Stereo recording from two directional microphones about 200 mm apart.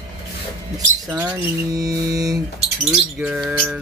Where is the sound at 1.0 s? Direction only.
10° right (ahead or behind).